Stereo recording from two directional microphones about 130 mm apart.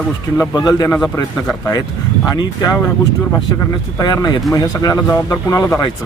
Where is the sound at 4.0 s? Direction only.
30° left (ahead or behind).